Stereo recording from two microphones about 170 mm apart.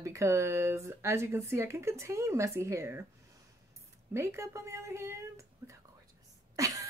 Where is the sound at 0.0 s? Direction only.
15° right (ahead or behind).